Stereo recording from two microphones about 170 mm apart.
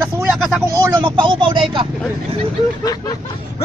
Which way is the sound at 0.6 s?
15° right (ahead or behind).